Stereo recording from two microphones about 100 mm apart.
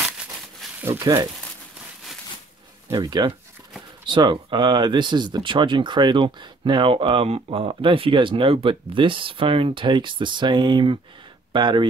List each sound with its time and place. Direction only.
0.7 s speech: 25° right (ahead or behind)
1.0 s speech: 40° right (ahead or behind)
2.9 s speech: 50° right (ahead or behind)